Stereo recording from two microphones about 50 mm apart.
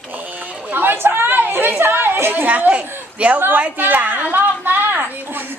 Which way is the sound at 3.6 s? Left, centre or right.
Right.